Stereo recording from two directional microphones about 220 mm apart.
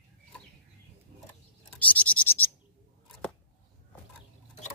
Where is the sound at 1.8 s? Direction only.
5° left (ahead or behind).